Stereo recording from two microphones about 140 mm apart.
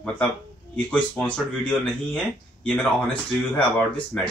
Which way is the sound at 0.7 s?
10° left (ahead or behind).